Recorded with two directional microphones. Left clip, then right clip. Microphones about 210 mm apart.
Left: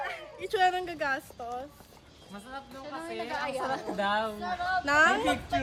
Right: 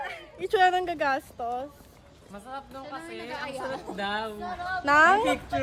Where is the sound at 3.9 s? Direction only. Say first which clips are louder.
Left 2 dB; 5° left (ahead or behind).